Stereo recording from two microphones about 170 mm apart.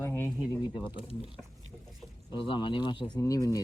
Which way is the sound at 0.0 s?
15° left (ahead or behind).